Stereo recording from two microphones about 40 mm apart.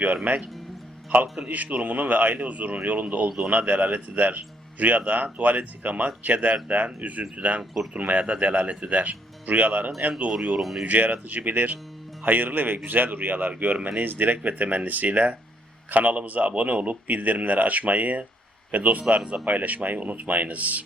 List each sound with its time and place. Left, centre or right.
0.3 s speech: right
1.5 s speech: right
3.2 s a man's voice: centre
3.5 s speech: right
7.6 s speech: centre
7.9 s speech: right
10.6 s speech: centre
10.8 s speech: right
14.0 s speech: right